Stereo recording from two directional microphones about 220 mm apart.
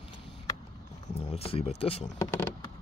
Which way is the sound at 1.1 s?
30° left (ahead or behind).